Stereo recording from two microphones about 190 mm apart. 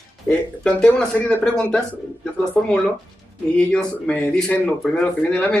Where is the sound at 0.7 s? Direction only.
5° left (ahead or behind).